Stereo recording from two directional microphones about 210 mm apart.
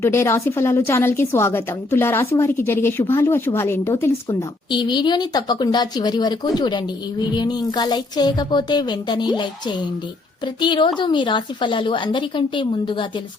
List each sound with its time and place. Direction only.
0.0 s a woman's voice: 10° left (ahead or behind)